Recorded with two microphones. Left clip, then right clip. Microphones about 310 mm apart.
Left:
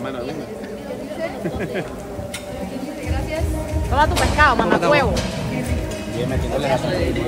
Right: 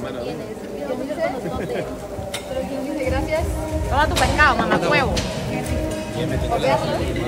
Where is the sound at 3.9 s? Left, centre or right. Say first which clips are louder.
Left 1 dB; centre.